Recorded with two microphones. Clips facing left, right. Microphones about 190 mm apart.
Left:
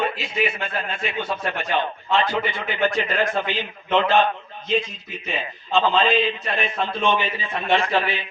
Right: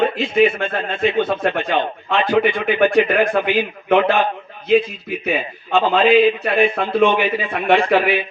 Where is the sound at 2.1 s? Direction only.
60° right (ahead or behind).